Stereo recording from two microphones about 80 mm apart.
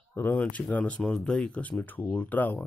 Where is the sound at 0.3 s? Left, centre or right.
Centre.